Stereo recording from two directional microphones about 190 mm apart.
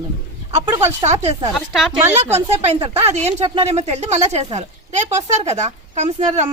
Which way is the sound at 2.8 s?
35° right (ahead or behind).